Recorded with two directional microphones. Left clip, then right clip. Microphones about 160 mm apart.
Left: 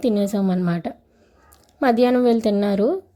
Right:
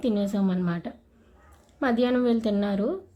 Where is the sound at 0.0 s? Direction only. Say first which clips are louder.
Left 6 dB; 35° left (ahead or behind).